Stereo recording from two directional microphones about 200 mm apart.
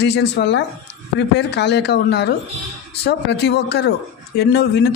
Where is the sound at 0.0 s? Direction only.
55° left (ahead or behind).